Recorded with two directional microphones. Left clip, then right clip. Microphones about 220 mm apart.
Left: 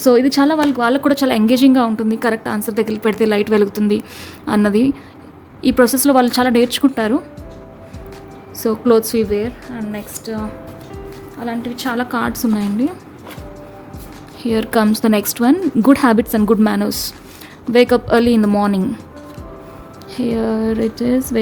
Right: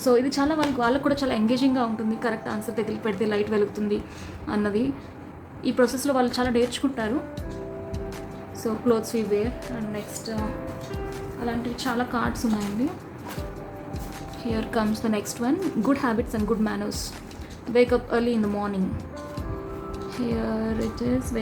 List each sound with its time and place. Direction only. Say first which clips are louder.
0.0 s a woman's voice: left 9 dB; 50° left (ahead or behind)
8.6 s a woman's voice: left 10 dB; 50° left (ahead or behind)
11.4 s a woman's voice: left 6 dB; 50° left (ahead or behind)
14.4 s a woman's voice: left 11 dB; 50° left (ahead or behind)
20.2 s a woman's voice: left 10 dB; 45° left (ahead or behind)